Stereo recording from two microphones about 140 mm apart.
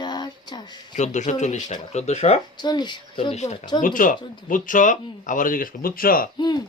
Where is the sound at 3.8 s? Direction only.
75° left (ahead or behind).